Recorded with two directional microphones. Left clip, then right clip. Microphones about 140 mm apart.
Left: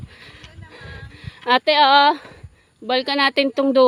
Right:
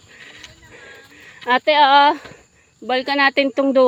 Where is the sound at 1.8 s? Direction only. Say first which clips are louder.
Right 2 dB; 15° left (ahead or behind).